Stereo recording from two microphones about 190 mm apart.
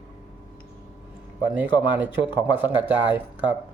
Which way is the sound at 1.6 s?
10° right (ahead or behind).